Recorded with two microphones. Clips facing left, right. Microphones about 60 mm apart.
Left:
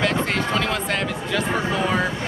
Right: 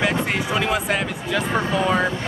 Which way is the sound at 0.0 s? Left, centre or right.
Centre.